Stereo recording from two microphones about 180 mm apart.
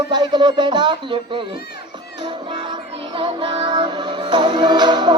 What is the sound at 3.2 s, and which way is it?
Music, 30° right (ahead or behind).